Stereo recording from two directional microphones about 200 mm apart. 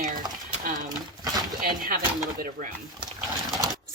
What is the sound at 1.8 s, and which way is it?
Speech, 45° right (ahead or behind).